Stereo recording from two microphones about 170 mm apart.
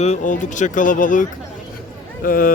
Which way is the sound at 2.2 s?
60° left (ahead or behind).